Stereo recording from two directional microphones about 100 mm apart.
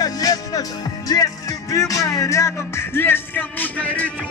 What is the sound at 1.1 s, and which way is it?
Music, 35° left (ahead or behind).